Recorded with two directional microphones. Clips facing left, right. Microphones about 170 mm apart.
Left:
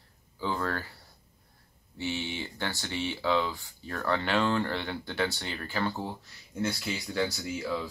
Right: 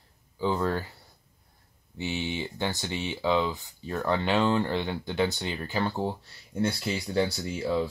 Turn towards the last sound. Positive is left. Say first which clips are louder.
# right 3 dB
turn(degrees=-30)  # may be behind; listen again after turning